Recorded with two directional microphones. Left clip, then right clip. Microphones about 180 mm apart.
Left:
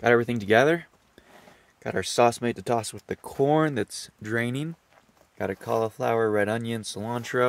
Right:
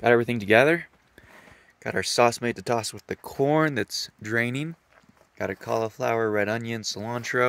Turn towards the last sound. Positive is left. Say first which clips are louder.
# right 1 dB
turn(degrees=0)  # may be behind; listen again after turning